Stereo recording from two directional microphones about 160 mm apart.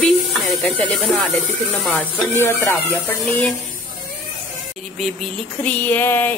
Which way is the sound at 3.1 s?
10° left (ahead or behind).